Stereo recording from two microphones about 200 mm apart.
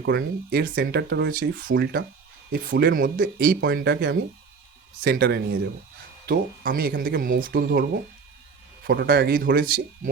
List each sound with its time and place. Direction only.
0.0 s speech: 55° right (ahead or behind)